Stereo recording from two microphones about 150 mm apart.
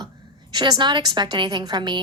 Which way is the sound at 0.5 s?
30° right (ahead or behind).